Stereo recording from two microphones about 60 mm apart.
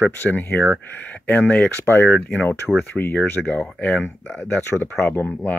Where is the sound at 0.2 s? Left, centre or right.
Left.